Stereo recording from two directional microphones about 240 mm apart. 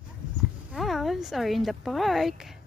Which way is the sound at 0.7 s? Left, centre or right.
Centre.